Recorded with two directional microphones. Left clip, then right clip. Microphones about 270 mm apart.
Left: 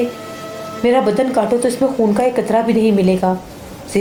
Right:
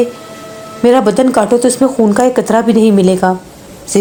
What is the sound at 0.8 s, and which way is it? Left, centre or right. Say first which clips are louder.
A woman's voice: right 5 dB; right.